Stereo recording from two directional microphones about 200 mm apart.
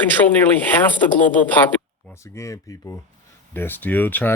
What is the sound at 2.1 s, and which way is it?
Speech, 15° left (ahead or behind).